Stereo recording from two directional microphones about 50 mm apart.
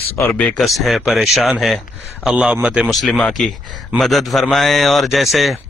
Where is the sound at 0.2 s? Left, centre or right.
Left.